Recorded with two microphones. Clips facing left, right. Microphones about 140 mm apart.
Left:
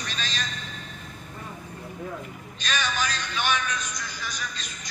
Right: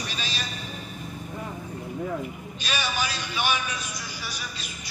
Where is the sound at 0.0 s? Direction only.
10° right (ahead or behind).